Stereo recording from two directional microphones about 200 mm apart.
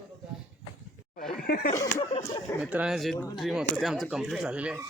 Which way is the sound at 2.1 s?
20° left (ahead or behind).